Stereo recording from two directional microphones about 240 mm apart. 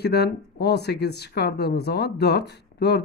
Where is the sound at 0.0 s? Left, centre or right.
Left.